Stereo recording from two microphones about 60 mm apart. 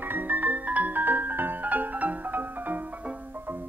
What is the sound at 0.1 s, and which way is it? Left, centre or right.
Music, right.